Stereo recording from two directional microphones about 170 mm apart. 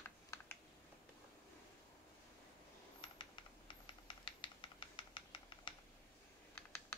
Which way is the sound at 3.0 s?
30° left (ahead or behind).